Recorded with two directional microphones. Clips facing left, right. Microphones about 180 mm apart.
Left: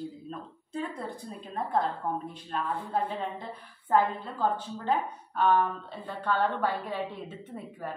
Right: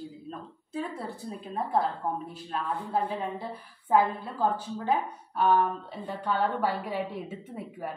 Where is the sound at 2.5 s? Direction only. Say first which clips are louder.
Right 1 dB; 5° right (ahead or behind).